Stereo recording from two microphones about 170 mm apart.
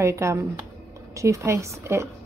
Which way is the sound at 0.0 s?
15° right (ahead or behind).